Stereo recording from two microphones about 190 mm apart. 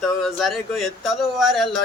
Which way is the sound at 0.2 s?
Centre (ahead or behind).